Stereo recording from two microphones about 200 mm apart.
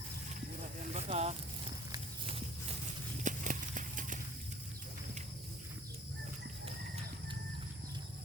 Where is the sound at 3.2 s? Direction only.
40° right (ahead or behind).